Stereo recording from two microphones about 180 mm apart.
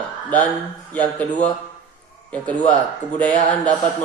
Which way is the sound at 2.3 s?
5° left (ahead or behind).